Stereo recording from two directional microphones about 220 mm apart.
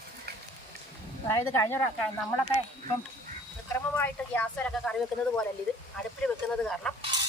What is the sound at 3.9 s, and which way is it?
Speech, 5° left (ahead or behind).